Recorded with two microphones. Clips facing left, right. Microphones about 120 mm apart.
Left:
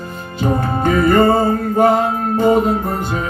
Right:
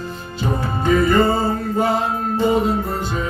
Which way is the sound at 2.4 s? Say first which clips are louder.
Left 4 dB; 50° left (ahead or behind).